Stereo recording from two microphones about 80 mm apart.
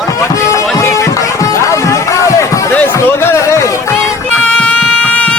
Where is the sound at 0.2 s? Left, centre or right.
Left.